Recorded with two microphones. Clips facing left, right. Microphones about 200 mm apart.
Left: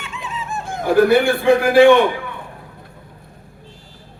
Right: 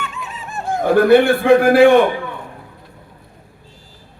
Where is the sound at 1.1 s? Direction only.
60° right (ahead or behind).